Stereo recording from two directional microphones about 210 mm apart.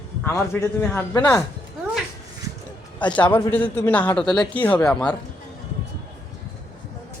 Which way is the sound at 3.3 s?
10° left (ahead or behind).